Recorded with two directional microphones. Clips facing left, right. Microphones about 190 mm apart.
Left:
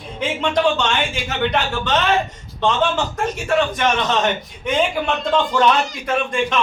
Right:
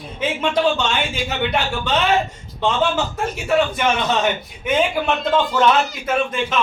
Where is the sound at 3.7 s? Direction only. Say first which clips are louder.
Even; 5° right (ahead or behind).